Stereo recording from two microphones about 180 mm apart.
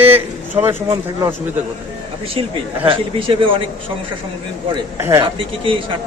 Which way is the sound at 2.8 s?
30° right (ahead or behind).